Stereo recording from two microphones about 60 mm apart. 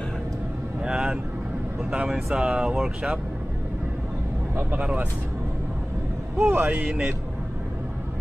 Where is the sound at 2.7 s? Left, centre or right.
Centre.